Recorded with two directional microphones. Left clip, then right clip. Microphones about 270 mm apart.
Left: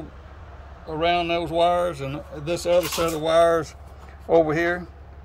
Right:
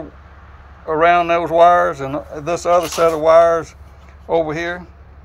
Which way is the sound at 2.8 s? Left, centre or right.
Centre.